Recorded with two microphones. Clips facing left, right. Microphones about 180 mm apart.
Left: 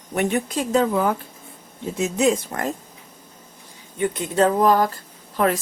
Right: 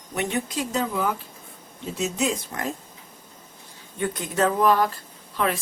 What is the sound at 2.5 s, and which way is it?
Speech, 55° left (ahead or behind).